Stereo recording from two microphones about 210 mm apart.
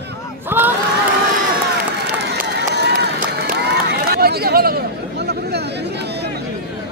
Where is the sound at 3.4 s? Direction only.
50° right (ahead or behind).